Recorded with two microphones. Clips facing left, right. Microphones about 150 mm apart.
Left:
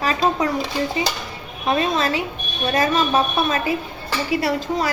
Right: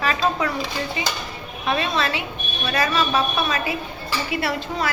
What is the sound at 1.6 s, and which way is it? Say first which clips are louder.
A woman's voice: left 3 dB; 40° left (ahead or behind).